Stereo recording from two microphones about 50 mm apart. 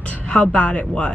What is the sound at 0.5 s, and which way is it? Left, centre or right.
Speech, left.